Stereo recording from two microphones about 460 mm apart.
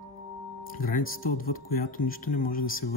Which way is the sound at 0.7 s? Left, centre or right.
Centre.